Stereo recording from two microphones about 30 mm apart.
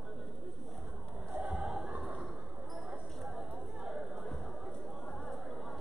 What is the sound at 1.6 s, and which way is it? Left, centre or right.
Choir, centre.